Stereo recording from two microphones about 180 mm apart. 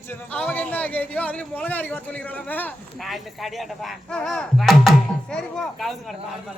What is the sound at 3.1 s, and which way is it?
Speech, centre (ahead or behind).